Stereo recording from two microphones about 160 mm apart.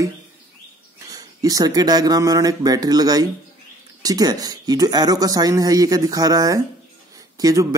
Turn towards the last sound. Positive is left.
turn(degrees=-25)  # may be behind; listen again after turning